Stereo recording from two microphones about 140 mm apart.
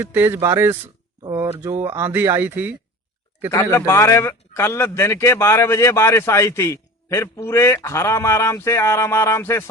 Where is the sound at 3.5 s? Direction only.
20° left (ahead or behind).